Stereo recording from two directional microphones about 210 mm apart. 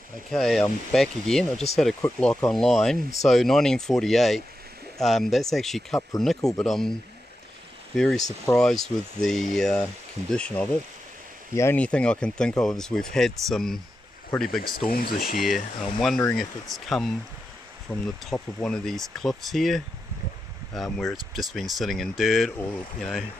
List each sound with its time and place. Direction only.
0.3 s speech: centre (ahead or behind)
7.9 s speech: centre (ahead or behind)
14.6 s speech: 45° left (ahead or behind)
15.8 s speech: centre (ahead or behind)